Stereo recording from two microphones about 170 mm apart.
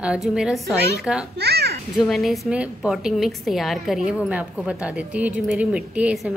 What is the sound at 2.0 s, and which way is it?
A woman's voice, centre (ahead or behind).